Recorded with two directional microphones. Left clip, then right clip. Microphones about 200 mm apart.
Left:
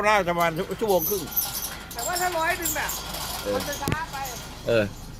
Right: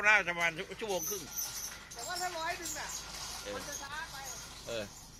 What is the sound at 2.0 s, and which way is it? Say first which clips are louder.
Speech: left 12 dB; 20° left (ahead or behind).